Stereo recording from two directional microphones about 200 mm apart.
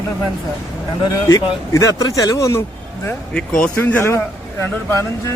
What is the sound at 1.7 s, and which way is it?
A man's voice, 15° left (ahead or behind).